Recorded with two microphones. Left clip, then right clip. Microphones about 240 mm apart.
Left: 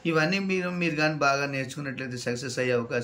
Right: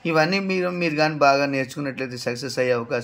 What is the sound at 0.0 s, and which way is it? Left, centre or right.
Speech, centre.